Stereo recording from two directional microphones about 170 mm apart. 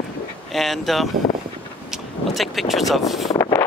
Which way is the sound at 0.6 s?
Centre (ahead or behind).